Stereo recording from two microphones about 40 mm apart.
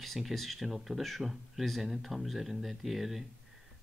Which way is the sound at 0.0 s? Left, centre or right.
Centre.